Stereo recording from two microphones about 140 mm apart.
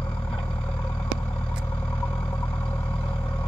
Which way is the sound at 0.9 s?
5° left (ahead or behind).